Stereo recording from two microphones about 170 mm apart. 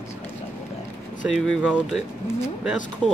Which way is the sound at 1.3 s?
5° right (ahead or behind).